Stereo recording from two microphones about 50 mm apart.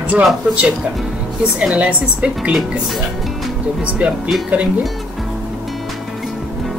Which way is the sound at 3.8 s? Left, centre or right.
Right.